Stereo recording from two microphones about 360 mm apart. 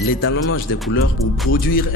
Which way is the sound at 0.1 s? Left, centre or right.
Left.